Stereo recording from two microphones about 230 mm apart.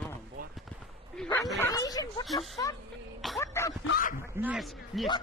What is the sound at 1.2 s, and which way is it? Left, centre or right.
Speech, centre.